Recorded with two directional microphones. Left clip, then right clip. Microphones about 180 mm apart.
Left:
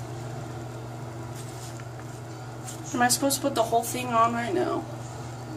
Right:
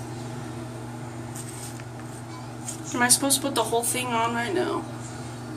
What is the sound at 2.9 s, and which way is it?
A woman's voice, 30° left (ahead or behind).